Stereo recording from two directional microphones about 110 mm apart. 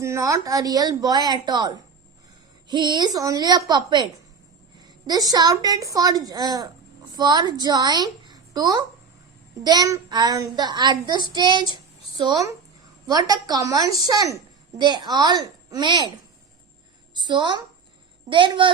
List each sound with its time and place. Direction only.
0.0 s a child's voice: 30° right (ahead or behind); by 16.1 s 45° right (ahead or behind)
17.2 s a woman's voice: 45° right (ahead or behind)